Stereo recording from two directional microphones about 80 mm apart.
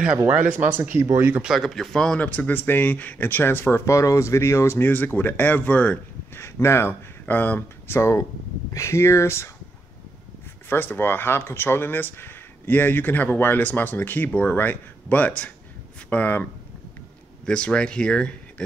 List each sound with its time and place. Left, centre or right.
0.7 s speech: right
1.4 s speech: centre
2.1 s speech: centre
6.3 s speech: left
7.2 s speech: left
8.7 s speech: left
10.7 s speech: left
17.5 s speech: centre